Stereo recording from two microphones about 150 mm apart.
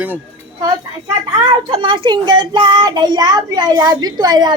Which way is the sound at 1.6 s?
35° right (ahead or behind).